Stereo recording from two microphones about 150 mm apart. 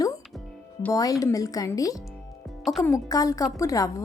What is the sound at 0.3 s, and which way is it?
Music, 10° left (ahead or behind).